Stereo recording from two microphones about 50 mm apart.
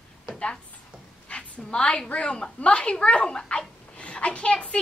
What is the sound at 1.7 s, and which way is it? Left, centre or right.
Speech, centre.